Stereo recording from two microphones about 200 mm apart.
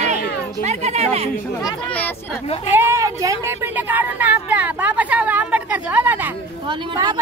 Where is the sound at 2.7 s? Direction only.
10° right (ahead or behind).